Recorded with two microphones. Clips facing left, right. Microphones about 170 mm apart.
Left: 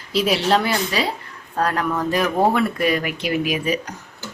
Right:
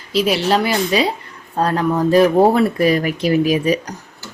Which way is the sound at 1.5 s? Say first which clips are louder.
Right 4 dB; 30° right (ahead or behind).